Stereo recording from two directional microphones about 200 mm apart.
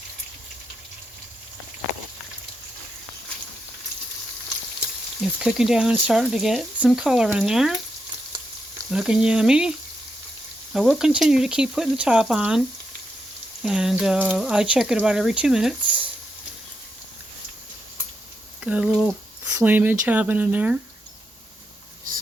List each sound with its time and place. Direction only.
5.2 s speech: centre (ahead or behind)
8.9 s speech: 5° right (ahead or behind)
18.6 s speech: 5° right (ahead or behind)